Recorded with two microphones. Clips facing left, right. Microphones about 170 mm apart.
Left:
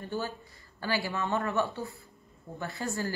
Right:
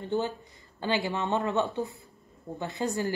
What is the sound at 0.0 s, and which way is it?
Speech, 20° right (ahead or behind).